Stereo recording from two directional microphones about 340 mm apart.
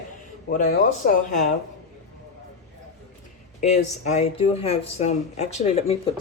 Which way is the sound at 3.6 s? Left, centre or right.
Centre.